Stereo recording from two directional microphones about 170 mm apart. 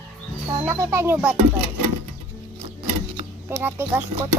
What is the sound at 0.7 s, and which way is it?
Speech, 15° right (ahead or behind).